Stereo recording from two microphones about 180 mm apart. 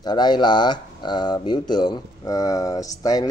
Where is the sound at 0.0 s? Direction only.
25° left (ahead or behind).